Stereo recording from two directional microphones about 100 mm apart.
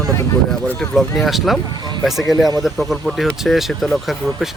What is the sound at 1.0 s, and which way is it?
Speech, centre (ahead or behind).